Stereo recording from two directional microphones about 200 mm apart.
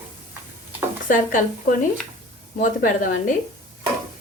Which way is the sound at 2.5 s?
40° left (ahead or behind).